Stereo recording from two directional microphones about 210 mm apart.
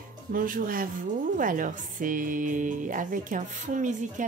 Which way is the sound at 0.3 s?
40° right (ahead or behind).